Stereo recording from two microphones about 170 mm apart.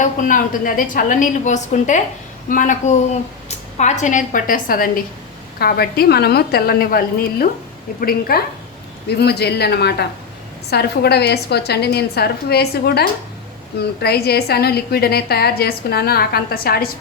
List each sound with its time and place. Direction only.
0.0 s a woman's voice: 50° left (ahead or behind)
5.5 s a woman's voice: 65° left (ahead or behind)